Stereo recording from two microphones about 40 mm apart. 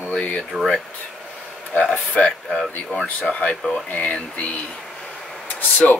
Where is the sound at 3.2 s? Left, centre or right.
Left.